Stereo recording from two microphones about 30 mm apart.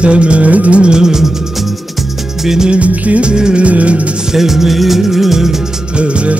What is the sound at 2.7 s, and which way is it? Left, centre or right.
Music, right.